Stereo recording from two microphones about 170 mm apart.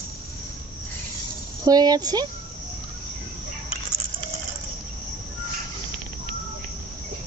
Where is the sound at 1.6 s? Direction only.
25° right (ahead or behind).